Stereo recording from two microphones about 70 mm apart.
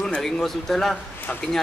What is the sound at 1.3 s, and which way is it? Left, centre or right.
Speech, centre.